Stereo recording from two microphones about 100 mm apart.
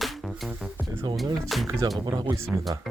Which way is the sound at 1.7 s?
30° right (ahead or behind).